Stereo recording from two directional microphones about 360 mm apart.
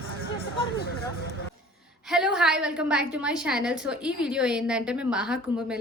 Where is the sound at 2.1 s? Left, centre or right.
Centre.